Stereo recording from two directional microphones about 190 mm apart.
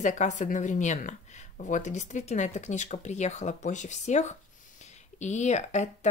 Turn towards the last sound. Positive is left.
turn(degrees=40)  # may be behind; listen again after turning